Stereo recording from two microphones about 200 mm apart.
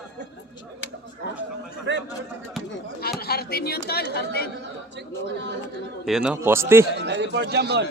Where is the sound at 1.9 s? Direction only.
60° right (ahead or behind).